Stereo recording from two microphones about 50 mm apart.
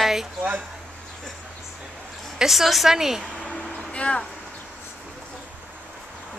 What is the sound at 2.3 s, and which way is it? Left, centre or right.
Speech, centre.